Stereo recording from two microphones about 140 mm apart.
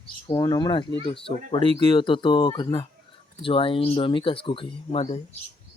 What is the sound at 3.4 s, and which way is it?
Speech, 40° left (ahead or behind).